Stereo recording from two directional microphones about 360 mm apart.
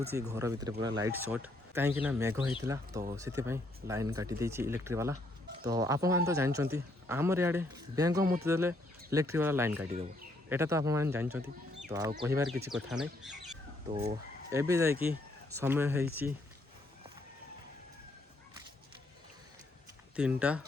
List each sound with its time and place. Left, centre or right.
0.1 s speech: centre
9.9 s speech: centre
10.5 s speech: centre
14.5 s speech: centre
20.1 s speech: centre